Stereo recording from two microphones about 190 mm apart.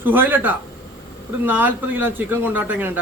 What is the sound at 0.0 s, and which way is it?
A man's voice, 10° right (ahead or behind).